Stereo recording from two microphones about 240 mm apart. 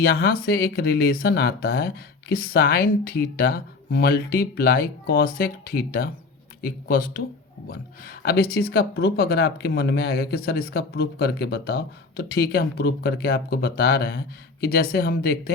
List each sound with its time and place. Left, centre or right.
0.0 s speech: left
8.2 s speech: left